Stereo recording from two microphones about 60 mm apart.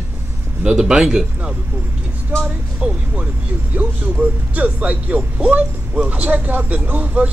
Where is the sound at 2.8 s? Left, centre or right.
Centre.